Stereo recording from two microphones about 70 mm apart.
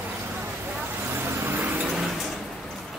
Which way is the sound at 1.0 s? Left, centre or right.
Right.